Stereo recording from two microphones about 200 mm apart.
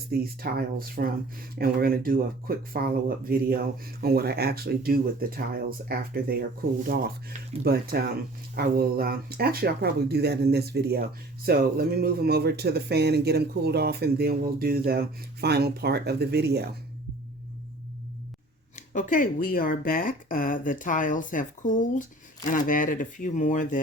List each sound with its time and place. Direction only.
0.1 s speech: 50° right (ahead or behind)
18.8 s speech: 40° left (ahead or behind)